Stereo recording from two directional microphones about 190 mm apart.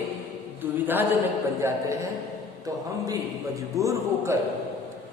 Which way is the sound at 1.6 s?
15° right (ahead or behind).